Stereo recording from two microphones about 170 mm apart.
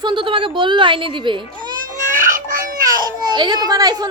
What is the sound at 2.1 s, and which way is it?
Baby cry, 50° right (ahead or behind).